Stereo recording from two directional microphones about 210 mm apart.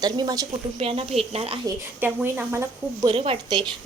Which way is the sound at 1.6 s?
10° right (ahead or behind).